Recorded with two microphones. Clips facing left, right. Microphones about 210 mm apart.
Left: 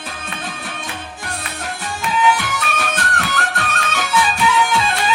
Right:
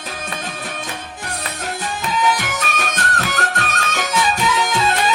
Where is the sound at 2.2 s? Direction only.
40° right (ahead or behind).